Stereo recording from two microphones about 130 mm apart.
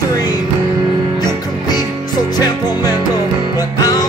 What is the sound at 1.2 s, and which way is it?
Music, 30° left (ahead or behind).